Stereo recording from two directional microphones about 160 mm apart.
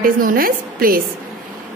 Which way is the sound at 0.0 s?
65° right (ahead or behind).